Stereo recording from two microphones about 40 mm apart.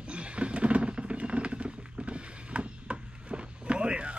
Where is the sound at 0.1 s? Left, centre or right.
Right.